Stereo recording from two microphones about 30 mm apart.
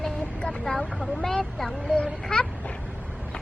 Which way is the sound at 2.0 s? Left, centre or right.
Left.